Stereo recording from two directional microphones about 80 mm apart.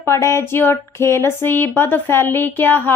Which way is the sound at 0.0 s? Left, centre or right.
Left.